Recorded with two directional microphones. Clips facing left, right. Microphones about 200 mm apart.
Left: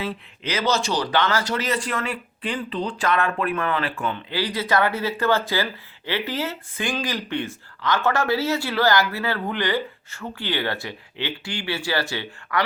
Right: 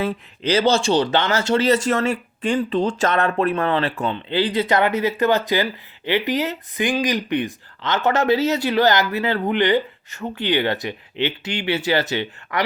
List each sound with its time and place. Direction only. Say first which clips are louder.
0.4 s speech: right 6 dB; 30° right (ahead or behind)
4.0 s speech: right 5 dB; 25° right (ahead or behind)